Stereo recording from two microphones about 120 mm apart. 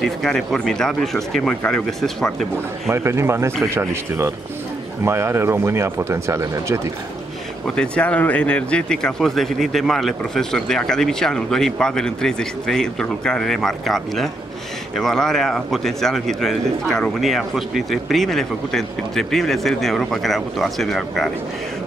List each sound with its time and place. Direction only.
0.0 s speech: 5° left (ahead or behind)
2.9 s speech: 20° right (ahead or behind)
7.6 s speech: 5° left (ahead or behind)